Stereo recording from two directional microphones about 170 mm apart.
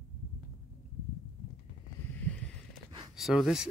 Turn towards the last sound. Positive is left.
turn(degrees=-5)  # may be behind; listen again after turning